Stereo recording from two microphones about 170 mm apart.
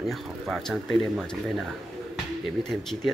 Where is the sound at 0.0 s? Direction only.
Centre (ahead or behind).